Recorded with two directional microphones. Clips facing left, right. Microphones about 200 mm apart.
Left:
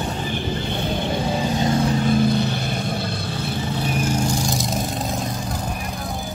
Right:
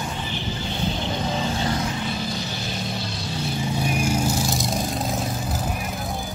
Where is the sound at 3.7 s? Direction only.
10° right (ahead or behind).